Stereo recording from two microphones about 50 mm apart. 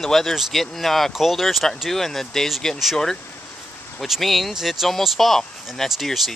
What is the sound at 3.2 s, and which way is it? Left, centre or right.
Vehicle, left.